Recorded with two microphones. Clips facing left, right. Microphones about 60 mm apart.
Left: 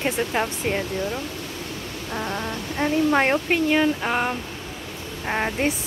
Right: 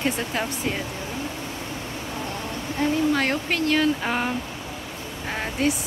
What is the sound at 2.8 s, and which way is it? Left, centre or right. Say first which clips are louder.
Speech: left 2 dB; left.